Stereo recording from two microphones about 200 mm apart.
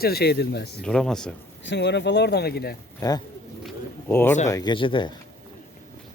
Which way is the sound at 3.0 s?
20° left (ahead or behind).